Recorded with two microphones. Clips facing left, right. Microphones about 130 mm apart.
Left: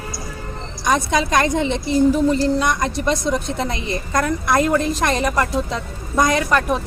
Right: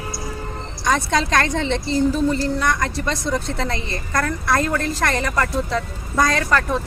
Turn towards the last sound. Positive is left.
turn(degrees=20)  # may be behind; listen again after turning